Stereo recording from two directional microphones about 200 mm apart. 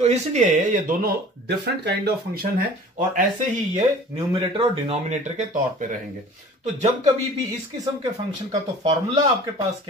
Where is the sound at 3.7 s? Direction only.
30° right (ahead or behind).